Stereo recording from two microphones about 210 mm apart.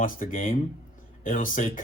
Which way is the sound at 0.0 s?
40° left (ahead or behind).